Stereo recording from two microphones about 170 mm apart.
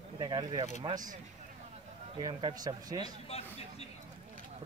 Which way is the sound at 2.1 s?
25° right (ahead or behind).